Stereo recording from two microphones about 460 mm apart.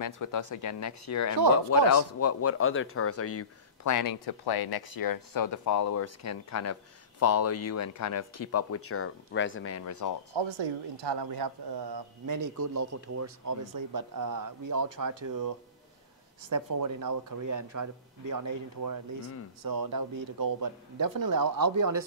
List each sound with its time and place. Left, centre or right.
0.0 s speech: left
10.3 s speech: right
16.4 s speech: right